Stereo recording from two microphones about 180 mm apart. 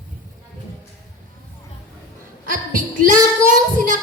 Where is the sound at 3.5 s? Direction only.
45° right (ahead or behind).